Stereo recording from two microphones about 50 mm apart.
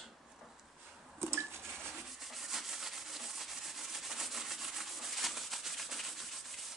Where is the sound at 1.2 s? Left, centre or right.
Right.